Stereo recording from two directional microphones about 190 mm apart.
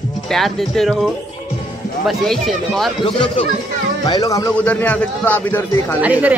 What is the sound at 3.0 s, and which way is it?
Speech, 25° left (ahead or behind).